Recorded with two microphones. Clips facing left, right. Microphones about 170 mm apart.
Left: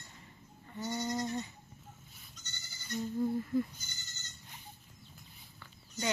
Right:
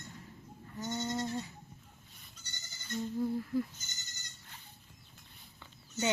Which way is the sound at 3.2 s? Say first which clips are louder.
Left 2 dB; centre (ahead or behind).